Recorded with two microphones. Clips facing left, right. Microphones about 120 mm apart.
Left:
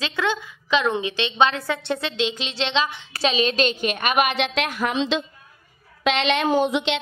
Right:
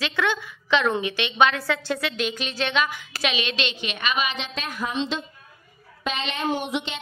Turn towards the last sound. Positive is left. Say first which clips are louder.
# left 7 dB
turn(degrees=80)